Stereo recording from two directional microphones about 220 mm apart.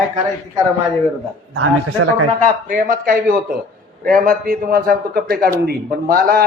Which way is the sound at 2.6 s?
40° right (ahead or behind).